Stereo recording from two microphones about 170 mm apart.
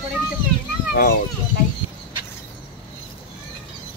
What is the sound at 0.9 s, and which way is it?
Speech, 60° left (ahead or behind).